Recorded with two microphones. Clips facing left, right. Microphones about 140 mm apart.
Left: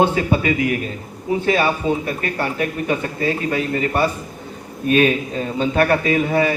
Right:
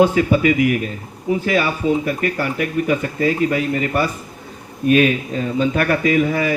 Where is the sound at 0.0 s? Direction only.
30° left (ahead or behind).